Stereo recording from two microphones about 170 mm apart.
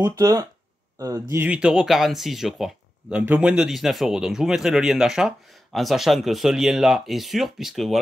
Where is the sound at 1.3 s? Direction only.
10° right (ahead or behind).